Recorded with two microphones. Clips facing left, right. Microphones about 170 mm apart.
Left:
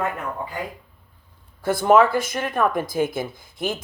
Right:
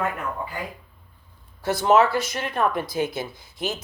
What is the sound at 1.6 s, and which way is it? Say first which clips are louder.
Speech: left 2 dB; 50° left (ahead or behind).